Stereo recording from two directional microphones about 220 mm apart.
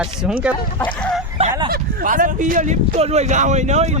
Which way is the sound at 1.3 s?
25° right (ahead or behind).